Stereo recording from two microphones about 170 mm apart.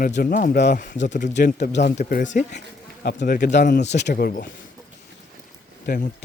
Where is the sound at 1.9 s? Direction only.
50° left (ahead or behind).